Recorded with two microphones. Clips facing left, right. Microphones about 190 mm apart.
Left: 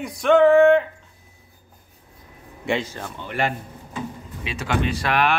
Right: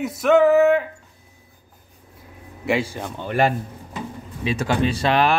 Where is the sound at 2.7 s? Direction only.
10° right (ahead or behind).